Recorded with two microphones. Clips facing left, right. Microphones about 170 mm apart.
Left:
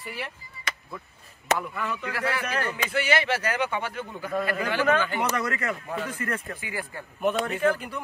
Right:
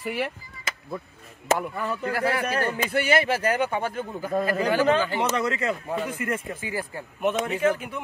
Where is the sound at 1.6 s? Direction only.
40° right (ahead or behind).